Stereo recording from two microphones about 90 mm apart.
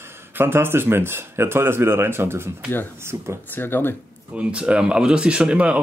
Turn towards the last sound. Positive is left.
turn(degrees=-15)  # may be behind; listen again after turning